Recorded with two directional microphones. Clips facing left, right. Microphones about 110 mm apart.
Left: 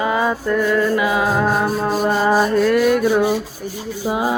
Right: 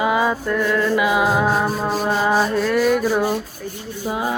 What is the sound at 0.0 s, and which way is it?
Music, 5° right (ahead or behind).